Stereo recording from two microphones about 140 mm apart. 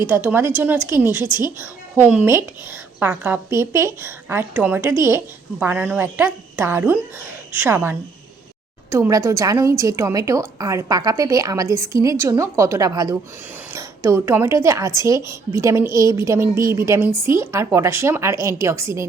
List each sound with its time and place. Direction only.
0.0 s a woman's voice: 15° right (ahead or behind)